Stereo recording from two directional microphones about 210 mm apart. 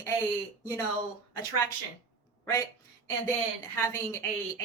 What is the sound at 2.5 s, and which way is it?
A woman's voice, 15° left (ahead or behind).